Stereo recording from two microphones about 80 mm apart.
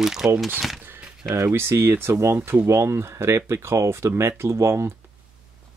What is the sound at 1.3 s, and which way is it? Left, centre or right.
Speech, right.